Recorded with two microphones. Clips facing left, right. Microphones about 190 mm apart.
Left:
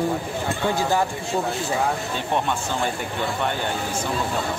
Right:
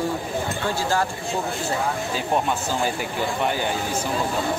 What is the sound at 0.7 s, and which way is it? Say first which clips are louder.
Speech: left 1 dB; 20° left (ahead or behind).